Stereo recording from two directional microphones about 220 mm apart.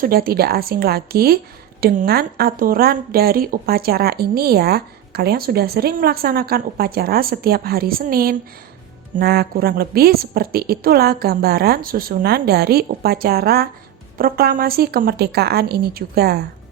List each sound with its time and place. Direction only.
0.0 s speech: 45° right (ahead or behind)